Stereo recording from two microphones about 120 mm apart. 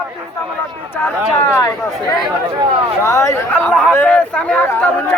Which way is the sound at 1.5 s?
30° left (ahead or behind).